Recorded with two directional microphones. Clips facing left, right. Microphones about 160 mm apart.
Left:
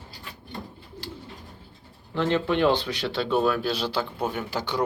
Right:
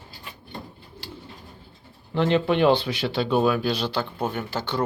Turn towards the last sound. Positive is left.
turn(degrees=10)  # may be behind; listen again after turning